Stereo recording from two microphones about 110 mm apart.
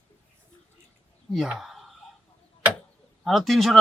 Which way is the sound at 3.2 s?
Centre (ahead or behind).